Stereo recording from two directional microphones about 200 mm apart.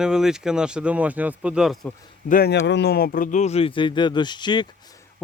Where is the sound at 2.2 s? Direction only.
50° left (ahead or behind); by 4.6 s 20° left (ahead or behind).